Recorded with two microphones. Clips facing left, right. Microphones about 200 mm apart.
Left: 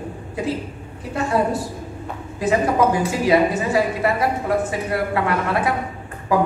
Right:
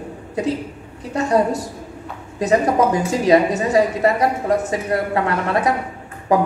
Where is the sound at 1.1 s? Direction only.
40° right (ahead or behind).